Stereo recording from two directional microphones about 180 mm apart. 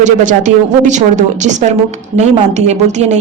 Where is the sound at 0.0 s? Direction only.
45° right (ahead or behind).